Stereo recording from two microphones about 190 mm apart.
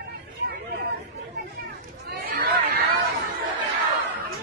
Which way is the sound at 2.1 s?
60° right (ahead or behind).